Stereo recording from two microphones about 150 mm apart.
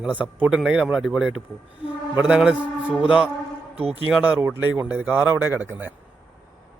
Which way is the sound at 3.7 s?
40° right (ahead or behind).